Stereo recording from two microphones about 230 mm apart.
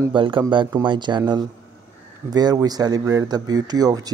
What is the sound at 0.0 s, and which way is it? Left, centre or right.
Speech, right.